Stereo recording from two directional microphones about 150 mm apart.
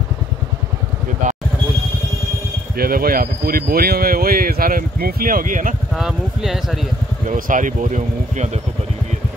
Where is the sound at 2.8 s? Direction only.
75° right (ahead or behind).